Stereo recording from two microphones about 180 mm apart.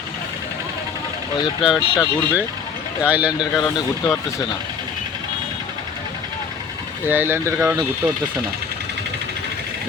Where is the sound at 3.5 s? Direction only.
15° left (ahead or behind).